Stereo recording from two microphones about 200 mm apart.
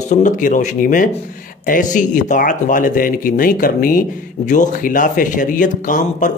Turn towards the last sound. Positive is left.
turn(degrees=40)  # may be behind; listen again after turning